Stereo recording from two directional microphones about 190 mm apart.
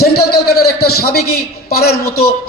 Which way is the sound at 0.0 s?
55° left (ahead or behind).